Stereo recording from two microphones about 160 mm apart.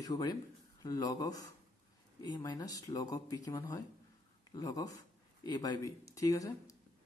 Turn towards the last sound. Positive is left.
turn(degrees=20)  # may be behind; listen again after turning